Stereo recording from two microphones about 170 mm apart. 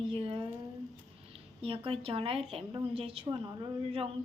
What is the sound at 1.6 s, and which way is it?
Speech, 30° right (ahead or behind).